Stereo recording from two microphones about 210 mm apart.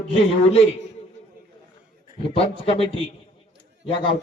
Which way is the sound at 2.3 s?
25° left (ahead or behind).